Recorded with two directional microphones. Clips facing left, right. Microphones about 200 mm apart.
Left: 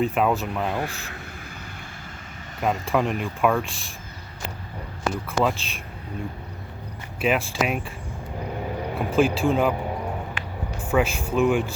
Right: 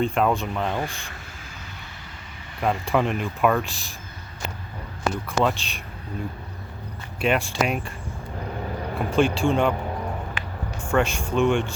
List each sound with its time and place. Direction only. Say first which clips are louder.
0.0 s speech: even; 5° left (ahead or behind)
2.6 s speech: even; centre (ahead or behind)
5.4 s speech: even; centre (ahead or behind)
7.2 s speech: even; centre (ahead or behind)
9.0 s speech: even; 5° left (ahead or behind)
10.8 s speech: even; 5° left (ahead or behind)